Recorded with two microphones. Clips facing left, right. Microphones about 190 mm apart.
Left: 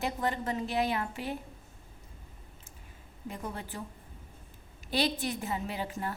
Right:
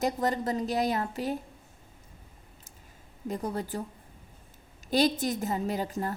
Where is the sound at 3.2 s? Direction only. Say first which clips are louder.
Right 7 dB; 40° right (ahead or behind).